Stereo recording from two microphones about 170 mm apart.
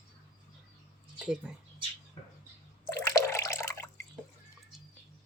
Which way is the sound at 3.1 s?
15° left (ahead or behind).